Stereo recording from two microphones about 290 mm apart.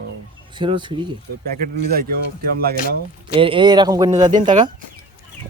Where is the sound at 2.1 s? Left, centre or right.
Right.